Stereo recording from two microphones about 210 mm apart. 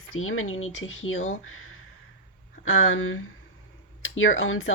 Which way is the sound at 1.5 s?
80° left.